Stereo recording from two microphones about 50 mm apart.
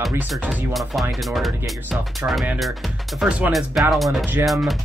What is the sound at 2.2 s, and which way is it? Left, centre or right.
Speech, right.